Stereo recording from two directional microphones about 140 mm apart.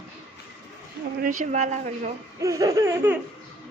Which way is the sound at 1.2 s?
70° right (ahead or behind).